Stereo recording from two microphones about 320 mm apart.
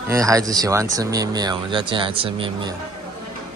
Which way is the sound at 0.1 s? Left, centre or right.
Centre.